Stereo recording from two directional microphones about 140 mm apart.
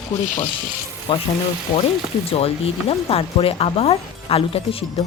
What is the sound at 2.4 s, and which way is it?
Speech, 45° left (ahead or behind).